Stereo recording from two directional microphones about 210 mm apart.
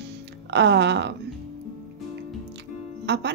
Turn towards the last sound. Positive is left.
turn(degrees=-55)  # may be behind; listen again after turning